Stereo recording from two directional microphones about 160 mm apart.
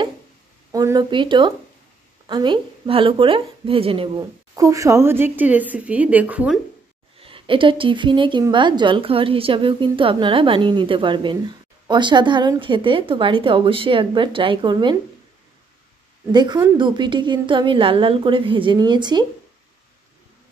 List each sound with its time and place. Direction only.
0.7 s a woman's voice: 20° right (ahead or behind)
4.6 s speech: 20° right (ahead or behind)
7.2 s a woman's voice: 35° right (ahead or behind)
16.3 s a woman's voice: 25° right (ahead or behind)